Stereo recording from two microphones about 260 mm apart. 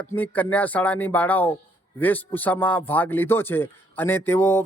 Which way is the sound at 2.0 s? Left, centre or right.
Centre.